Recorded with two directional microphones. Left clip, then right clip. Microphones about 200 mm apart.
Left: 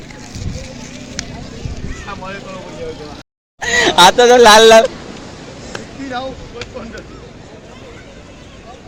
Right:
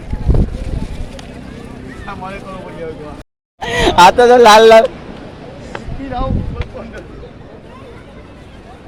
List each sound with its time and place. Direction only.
3.6 s speech: 10° right (ahead or behind)
5.7 s chop: 50° left (ahead or behind)